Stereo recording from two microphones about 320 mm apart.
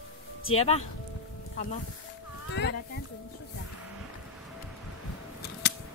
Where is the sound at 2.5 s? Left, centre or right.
Left.